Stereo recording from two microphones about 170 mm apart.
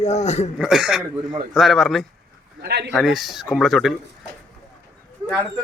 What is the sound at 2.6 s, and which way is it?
Speech, 75° right (ahead or behind).